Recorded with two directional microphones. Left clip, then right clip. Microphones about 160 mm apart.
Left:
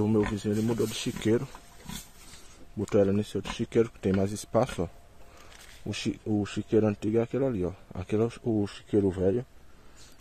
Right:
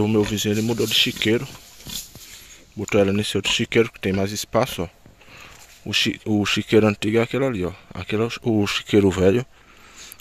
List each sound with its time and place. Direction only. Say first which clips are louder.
0.0 s speech: right 7 dB; 15° right (ahead or behind)
0.5 s speech: right 7 dB; 25° right (ahead or behind)
2.8 s speech: right 6 dB; 20° right (ahead or behind)
8.5 s speech: right 9 dB; 20° right (ahead or behind)